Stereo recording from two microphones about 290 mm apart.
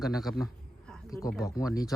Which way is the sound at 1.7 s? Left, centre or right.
Centre.